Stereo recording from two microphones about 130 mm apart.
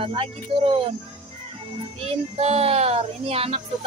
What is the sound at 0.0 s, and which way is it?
Speech, 45° right (ahead or behind).